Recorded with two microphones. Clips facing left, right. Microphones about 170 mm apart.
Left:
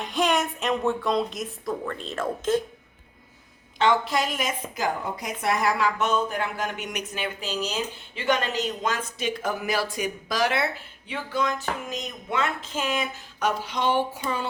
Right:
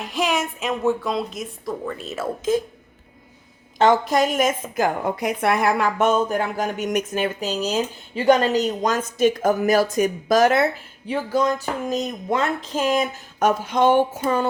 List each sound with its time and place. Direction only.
0.0 s a woman's voice: 5° right (ahead or behind)
3.8 s a woman's voice: 45° right (ahead or behind)